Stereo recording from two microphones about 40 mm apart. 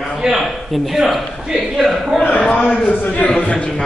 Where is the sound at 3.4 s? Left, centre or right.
Left.